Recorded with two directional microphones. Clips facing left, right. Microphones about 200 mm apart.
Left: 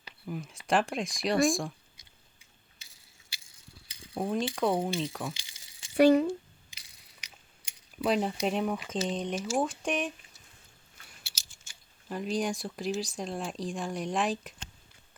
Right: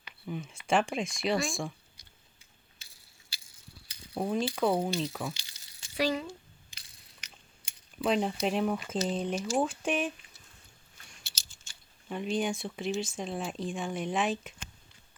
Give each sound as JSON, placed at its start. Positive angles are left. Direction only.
{"t": 0.3, "sound": "speech", "side_deg": 0}
{"t": 4.1, "sound": "speech", "side_deg": 0}
{"t": 6.0, "sound": "speech", "side_deg": 60}
{"t": 6.7, "sound": "crushing", "side_deg": 10}
{"t": 8.0, "sound": "speech", "side_deg": 0}
{"t": 11.1, "sound": "speech", "side_deg": 5}